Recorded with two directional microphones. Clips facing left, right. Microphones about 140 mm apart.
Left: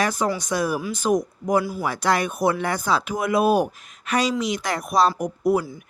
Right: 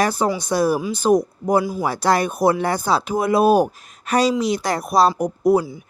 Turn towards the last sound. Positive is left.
turn(degrees=-35)  # may be behind; listen again after turning